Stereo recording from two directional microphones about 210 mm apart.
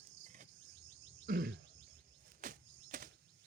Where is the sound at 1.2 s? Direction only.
45° right (ahead or behind).